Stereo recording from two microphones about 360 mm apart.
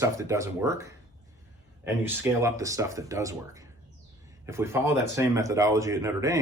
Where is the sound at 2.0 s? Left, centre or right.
Centre.